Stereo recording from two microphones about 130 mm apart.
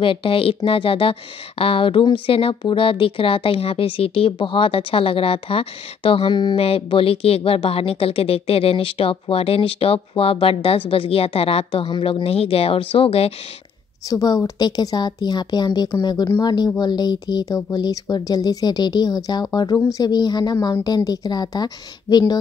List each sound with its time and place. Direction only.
0.0 s speech: 40° left (ahead or behind)
14.0 s speech: 30° left (ahead or behind)